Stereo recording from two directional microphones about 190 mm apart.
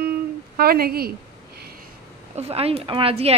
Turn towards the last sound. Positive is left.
turn(degrees=-30)  # may be behind; listen again after turning